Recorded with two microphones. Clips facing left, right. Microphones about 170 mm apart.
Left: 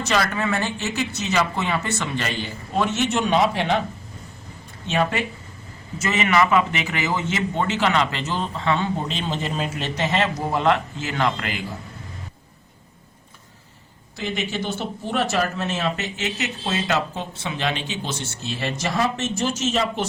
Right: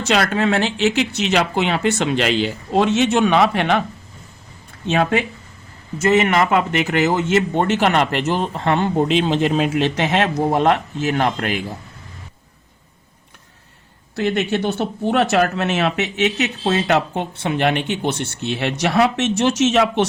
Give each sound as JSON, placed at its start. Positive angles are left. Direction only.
{"t": 0.1, "sound": "speech", "side_deg": -80}
{"t": 6.0, "sound": "speech", "side_deg": -55}
{"t": 14.2, "sound": "speech", "side_deg": -70}